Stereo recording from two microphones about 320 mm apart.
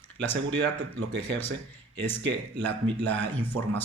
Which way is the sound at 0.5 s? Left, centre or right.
Right.